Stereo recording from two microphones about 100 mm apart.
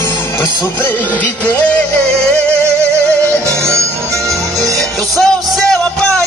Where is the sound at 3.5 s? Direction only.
30° right (ahead or behind).